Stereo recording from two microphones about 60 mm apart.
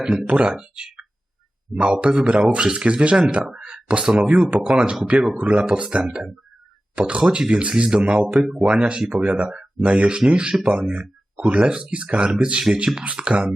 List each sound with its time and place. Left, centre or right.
0.3 s speech: centre
8.7 s speech: centre
10.7 s speech: right